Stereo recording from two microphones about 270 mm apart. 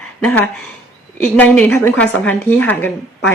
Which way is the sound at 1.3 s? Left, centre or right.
Centre.